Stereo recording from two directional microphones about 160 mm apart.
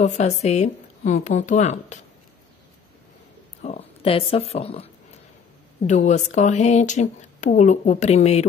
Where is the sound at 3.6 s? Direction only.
45° left (ahead or behind).